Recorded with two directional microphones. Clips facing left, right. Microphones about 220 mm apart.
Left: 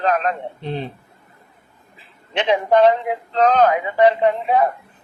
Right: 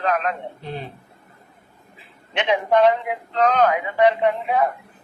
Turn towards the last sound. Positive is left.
turn(degrees=35)  # may be behind; listen again after turning